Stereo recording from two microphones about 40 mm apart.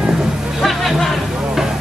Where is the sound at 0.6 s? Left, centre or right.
Centre.